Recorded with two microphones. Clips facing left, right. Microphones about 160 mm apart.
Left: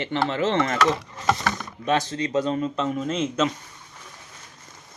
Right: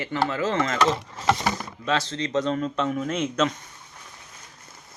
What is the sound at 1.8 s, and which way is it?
Speech, 15° left (ahead or behind).